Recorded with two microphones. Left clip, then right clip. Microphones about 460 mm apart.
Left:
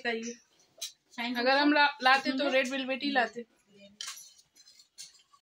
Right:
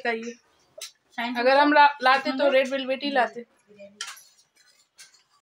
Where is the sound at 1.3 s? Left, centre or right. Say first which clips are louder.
Right 7 dB; left.